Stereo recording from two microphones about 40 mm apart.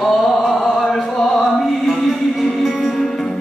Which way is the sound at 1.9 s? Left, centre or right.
Centre.